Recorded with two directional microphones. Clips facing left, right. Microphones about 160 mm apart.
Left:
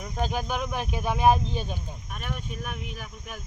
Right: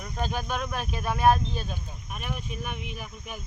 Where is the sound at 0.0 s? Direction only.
15° left (ahead or behind).